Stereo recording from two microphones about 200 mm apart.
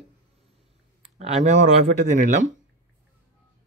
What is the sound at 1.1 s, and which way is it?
Speech, 35° right (ahead or behind).